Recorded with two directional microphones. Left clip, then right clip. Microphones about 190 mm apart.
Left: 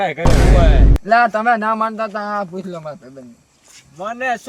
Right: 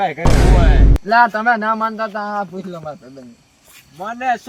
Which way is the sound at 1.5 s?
25° left (ahead or behind).